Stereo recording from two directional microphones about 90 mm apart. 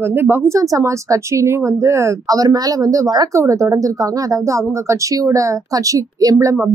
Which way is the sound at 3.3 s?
35° right (ahead or behind).